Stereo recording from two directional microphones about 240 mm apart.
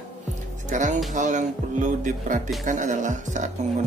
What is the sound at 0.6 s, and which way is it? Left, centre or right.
Speech, right.